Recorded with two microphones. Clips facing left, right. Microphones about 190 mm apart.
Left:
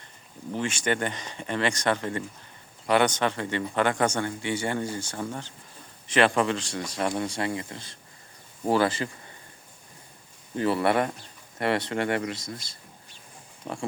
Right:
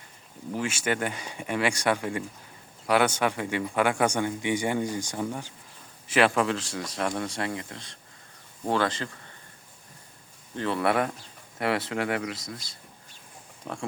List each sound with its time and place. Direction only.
0.5 s speech: 5° right (ahead or behind)
10.5 s speech: 5° left (ahead or behind)